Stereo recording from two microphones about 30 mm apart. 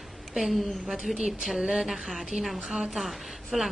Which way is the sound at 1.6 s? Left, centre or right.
Right.